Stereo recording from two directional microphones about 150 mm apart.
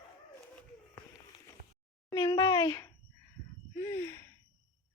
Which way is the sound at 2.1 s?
30° left (ahead or behind).